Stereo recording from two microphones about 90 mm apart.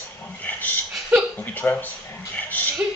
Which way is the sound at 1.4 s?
20° left (ahead or behind).